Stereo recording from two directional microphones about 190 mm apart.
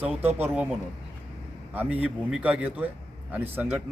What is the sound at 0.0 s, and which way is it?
Speech, 10° right (ahead or behind).